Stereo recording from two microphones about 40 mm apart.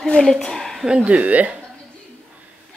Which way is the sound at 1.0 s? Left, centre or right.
Right.